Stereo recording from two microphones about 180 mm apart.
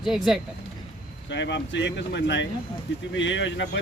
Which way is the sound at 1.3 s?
75° left (ahead or behind).